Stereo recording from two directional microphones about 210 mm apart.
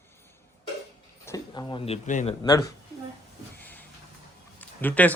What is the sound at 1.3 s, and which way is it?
Speech, 20° left (ahead or behind).